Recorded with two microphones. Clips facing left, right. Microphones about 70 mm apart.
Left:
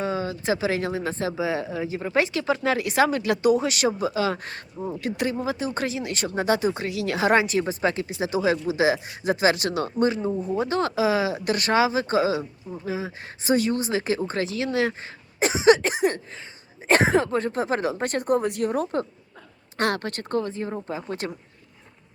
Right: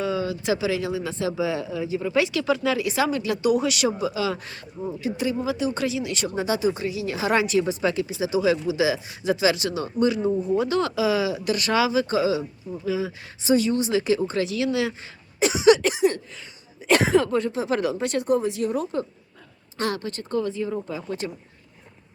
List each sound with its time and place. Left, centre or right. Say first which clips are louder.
0.0 s speech: right 1 dB; left
1.3 s speech: right 1 dB; left
2.7 s speech: left 2 dB; left
4.9 s speech: even; left
5.3 s speech: right 2 dB; left
7.3 s speech: even; left
10.2 s speech: right 3 dB; centre
10.5 s speech: right 2 dB; left